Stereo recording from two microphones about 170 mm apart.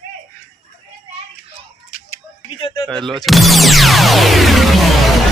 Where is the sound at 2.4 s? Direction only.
30° left (ahead or behind).